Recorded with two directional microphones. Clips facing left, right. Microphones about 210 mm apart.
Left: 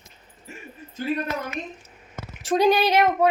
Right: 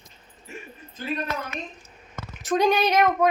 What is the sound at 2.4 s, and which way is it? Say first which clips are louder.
Speech: left 2 dB; 30° left (ahead or behind).